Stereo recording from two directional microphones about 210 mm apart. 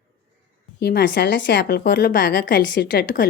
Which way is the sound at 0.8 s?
50° left (ahead or behind).